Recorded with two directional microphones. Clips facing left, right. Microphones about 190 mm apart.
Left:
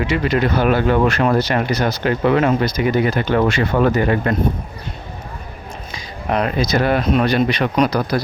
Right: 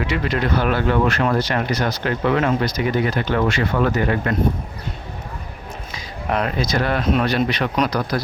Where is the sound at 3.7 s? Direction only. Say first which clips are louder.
Left 3 dB; 25° left (ahead or behind).